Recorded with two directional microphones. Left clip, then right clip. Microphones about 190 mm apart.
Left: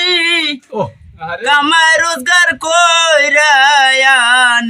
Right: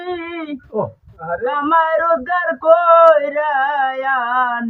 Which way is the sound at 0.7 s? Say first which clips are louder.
Even; 45° left (ahead or behind).